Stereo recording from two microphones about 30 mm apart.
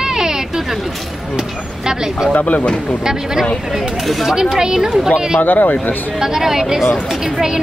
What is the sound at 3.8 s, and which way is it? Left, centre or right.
Speech, centre.